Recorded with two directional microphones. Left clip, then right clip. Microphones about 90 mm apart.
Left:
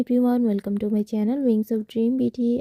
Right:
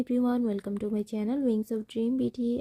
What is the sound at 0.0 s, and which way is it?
Speech, 40° left (ahead or behind).